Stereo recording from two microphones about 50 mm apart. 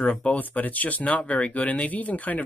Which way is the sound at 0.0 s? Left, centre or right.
Left.